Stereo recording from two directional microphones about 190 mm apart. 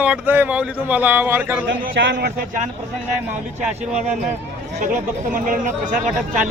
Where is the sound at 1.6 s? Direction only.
65° right (ahead or behind).